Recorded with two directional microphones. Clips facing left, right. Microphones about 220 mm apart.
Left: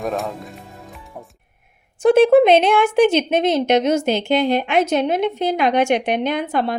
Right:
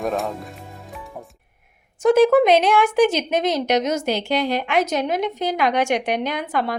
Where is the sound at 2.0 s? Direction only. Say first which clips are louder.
Left 3 dB; 30° left (ahead or behind).